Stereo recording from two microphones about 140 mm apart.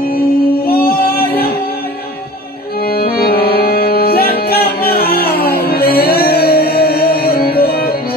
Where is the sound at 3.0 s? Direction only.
90° left.